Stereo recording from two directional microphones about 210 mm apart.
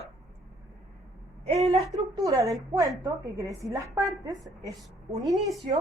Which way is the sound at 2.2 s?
15° right (ahead or behind).